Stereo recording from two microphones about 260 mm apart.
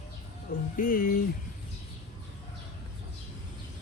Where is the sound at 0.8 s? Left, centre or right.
Left.